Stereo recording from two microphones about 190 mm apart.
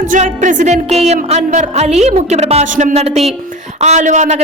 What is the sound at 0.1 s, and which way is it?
Music, 40° right (ahead or behind).